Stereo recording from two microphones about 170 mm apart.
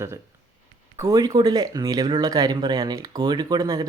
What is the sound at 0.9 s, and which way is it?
Speech, 20° right (ahead or behind).